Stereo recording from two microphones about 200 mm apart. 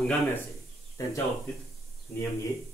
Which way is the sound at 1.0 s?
15° left (ahead or behind).